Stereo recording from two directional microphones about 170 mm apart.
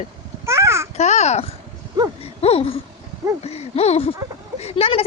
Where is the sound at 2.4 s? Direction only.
35° left (ahead or behind).